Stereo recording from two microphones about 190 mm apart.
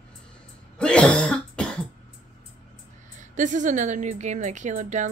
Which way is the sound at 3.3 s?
40° right (ahead or behind).